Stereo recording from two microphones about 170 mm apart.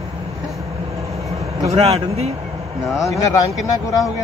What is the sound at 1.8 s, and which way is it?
Speech, 40° right (ahead or behind).